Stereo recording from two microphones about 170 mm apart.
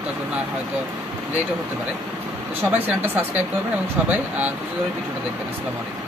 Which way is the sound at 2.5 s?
10° right (ahead or behind).